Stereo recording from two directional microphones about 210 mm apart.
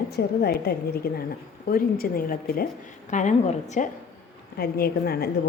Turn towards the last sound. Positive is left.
turn(degrees=45)  # may be behind; listen again after turning